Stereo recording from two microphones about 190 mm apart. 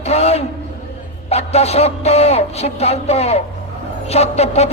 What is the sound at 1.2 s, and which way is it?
A man's voice, 35° left (ahead or behind).